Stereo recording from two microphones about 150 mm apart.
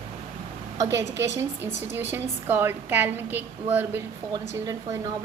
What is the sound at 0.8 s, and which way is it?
A woman's voice, 20° right (ahead or behind).